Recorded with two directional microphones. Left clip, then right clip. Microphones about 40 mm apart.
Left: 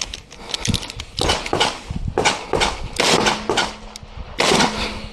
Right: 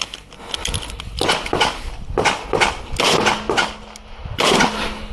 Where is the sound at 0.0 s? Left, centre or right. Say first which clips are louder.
Right 1 dB; centre.